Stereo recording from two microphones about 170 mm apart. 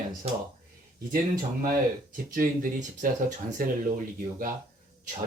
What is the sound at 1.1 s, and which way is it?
Speech, 60° right (ahead or behind).